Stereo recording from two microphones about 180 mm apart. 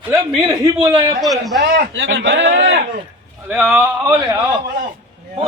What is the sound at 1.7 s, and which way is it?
Speech, 85° right.